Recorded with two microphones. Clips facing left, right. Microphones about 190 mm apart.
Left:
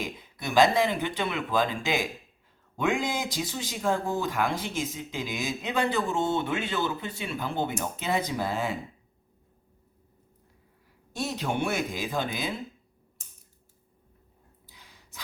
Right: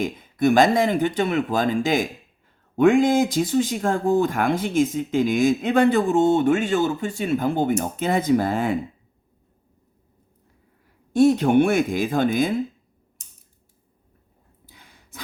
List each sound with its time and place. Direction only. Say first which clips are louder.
0.0 s speech: right 14 dB; 50° right (ahead or behind)
11.1 s speech: right 15 dB; 50° right (ahead or behind)
14.7 s sigh: right 7 dB; 55° right (ahead or behind)